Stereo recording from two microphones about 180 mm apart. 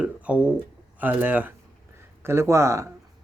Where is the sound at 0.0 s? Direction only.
5° right (ahead or behind).